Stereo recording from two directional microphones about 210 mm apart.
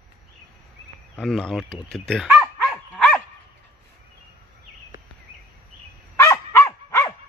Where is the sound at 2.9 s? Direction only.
5° left (ahead or behind).